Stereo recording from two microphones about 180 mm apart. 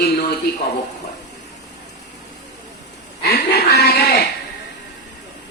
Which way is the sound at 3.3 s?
65° left (ahead or behind).